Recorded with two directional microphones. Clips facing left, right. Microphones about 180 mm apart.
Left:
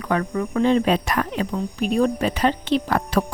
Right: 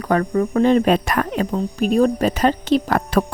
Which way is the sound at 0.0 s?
40° right (ahead or behind).